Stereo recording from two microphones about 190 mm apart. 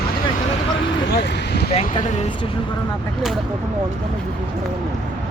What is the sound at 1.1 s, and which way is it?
Speech, 60° left (ahead or behind).